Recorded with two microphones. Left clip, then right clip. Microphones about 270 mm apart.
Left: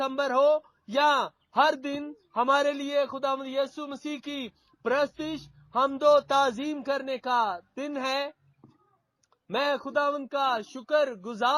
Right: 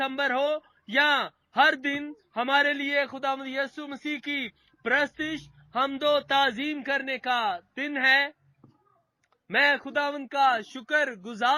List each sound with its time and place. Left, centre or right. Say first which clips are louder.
0.0 s speech: left 2 dB; centre
9.5 s speech: right 4 dB; centre